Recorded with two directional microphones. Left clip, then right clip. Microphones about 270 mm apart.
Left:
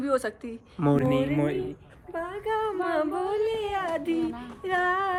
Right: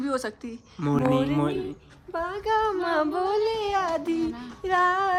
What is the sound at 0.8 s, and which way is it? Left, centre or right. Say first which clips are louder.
Speech: left 2 dB; centre.